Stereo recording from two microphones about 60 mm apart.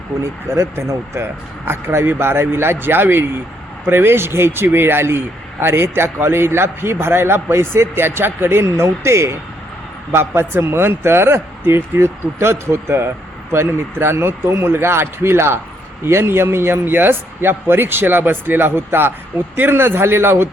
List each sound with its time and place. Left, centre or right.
0.2 s a man's voice: right